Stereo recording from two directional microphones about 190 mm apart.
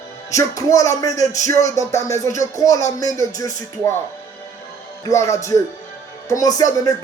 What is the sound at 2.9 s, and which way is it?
Music, 20° left (ahead or behind).